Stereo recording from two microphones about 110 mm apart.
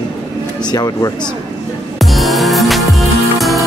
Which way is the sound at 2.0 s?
Centre (ahead or behind).